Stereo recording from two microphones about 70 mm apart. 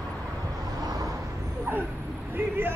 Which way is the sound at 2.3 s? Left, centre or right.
Right.